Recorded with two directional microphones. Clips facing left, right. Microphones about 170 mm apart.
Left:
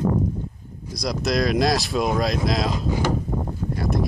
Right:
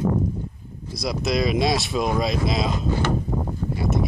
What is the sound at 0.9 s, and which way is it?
Speech, 5° right (ahead or behind).